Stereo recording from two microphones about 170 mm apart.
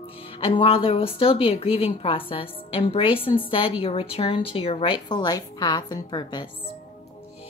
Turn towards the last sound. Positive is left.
turn(degrees=25)  # may be behind; listen again after turning